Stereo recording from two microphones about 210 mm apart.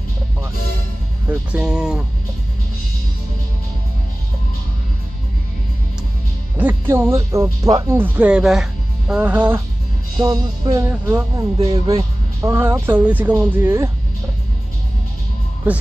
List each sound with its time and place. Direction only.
1.3 s speech: 5° right (ahead or behind)
6.6 s speech: 10° right (ahead or behind)